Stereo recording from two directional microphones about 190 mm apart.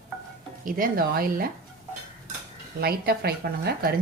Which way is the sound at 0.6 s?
45° right (ahead or behind).